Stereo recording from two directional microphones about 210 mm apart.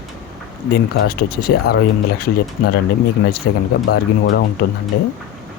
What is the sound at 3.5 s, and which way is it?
Speech, 50° left (ahead or behind).